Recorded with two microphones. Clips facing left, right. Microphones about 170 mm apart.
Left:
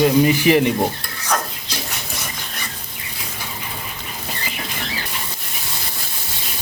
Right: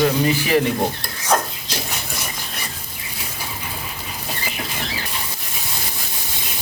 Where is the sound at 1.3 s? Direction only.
30° right (ahead or behind).